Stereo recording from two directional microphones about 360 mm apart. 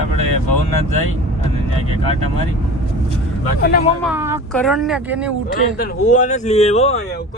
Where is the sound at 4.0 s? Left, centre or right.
Centre.